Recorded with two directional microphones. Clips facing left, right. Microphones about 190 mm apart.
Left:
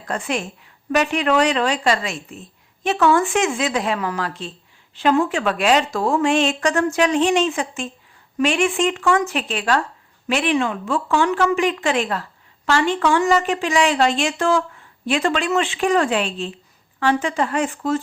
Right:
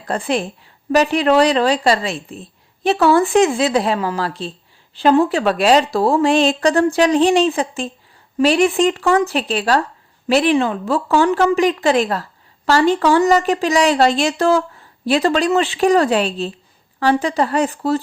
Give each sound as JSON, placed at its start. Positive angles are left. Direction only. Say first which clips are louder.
{"t": 0.0, "sound": "a woman's voice", "louder": "right 5 dB", "side_deg": -35}